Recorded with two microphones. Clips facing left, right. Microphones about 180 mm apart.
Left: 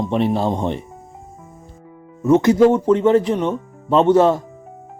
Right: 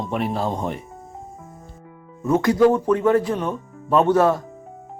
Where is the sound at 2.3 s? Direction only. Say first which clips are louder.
Left 4 dB; 20° left (ahead or behind).